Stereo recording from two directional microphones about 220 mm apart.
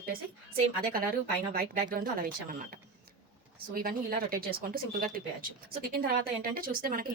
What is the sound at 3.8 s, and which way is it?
A woman's voice, 40° right (ahead or behind).